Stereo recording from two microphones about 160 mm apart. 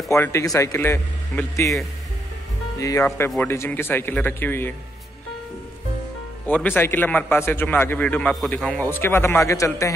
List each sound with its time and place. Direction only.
0.1 s a man's voice: 15° left (ahead or behind)
2.8 s speech: 20° left (ahead or behind)
3.3 s a man's voice: 5° left (ahead or behind)
6.4 s a man's voice: 10° left (ahead or behind)